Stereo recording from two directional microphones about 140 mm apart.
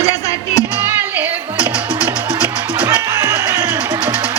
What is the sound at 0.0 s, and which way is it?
Music, 25° left (ahead or behind).